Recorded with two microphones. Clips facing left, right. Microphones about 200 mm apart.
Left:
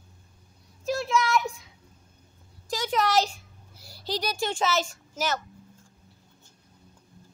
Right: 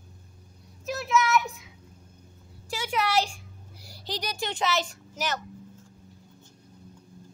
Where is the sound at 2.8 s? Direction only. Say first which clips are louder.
Left 2 dB; 10° right (ahead or behind).